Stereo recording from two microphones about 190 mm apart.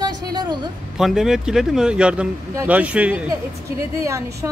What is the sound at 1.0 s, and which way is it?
A woman's voice, centre (ahead or behind).